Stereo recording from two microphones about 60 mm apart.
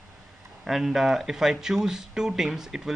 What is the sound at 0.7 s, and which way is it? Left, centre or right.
Speech, centre.